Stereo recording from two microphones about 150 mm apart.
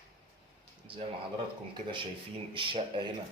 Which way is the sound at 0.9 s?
35° right (ahead or behind).